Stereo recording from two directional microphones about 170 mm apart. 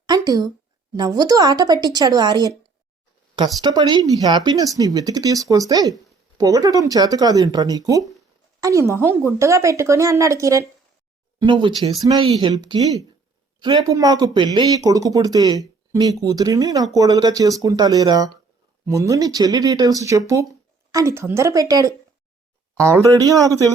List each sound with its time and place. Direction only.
0.0 s a sound: 25° right (ahead or behind)
0.9 s speech: 20° right (ahead or behind)
11.3 s speech: 30° right (ahead or behind)
23.0 s speech: 20° right (ahead or behind)